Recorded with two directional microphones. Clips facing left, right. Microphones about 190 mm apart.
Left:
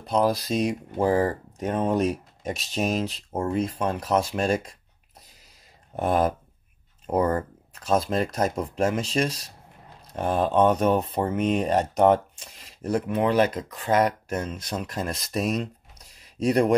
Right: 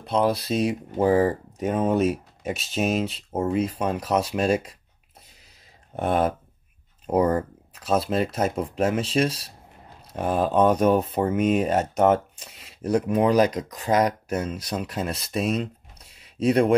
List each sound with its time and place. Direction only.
0.0 s speech: centre (ahead or behind)
5.9 s speech: centre (ahead or behind)
7.1 s speech: 10° right (ahead or behind)
10.1 s speech: 5° right (ahead or behind)
13.9 s speech: 35° right (ahead or behind)
14.7 s speech: 5° right (ahead or behind)